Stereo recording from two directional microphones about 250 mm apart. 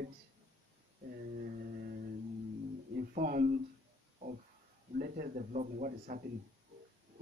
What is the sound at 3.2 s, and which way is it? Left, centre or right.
Speech, right.